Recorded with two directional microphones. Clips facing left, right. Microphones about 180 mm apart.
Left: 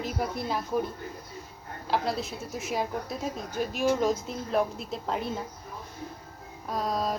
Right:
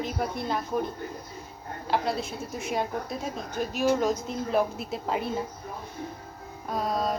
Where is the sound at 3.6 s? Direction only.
45° right (ahead or behind).